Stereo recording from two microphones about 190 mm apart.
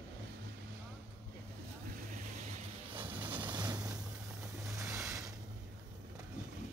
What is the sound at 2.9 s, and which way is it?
Vehicle, 25° right (ahead or behind).